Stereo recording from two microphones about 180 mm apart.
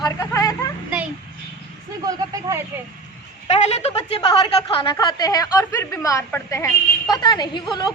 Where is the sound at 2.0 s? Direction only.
20° right (ahead or behind).